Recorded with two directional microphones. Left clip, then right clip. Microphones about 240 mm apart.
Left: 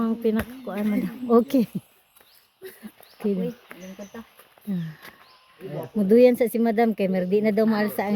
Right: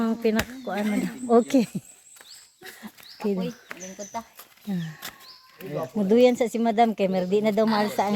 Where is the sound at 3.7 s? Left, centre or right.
Right.